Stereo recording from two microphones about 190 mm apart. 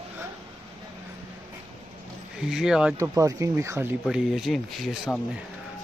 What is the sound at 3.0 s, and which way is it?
Speech, 15° right (ahead or behind).